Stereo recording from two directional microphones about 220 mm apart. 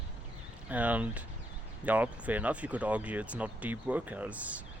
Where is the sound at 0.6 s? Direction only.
5° right (ahead or behind).